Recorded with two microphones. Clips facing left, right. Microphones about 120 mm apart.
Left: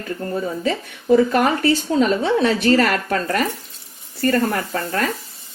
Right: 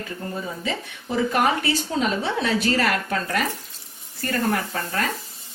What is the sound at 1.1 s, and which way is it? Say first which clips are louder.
Speech: left 6 dB; 45° left (ahead or behind).